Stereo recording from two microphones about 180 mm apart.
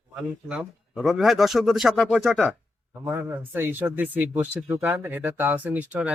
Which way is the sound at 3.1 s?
10° right (ahead or behind).